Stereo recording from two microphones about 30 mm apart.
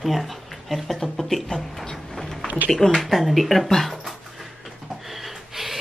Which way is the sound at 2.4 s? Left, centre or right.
Right.